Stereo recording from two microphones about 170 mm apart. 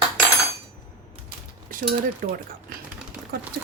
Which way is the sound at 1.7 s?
55° right (ahead or behind).